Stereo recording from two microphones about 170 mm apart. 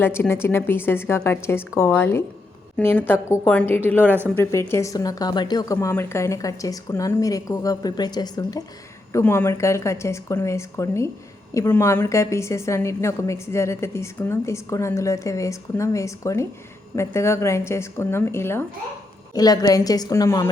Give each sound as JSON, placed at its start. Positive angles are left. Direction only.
{"t": 0.0, "sound": "a woman's voice", "side_deg": 15}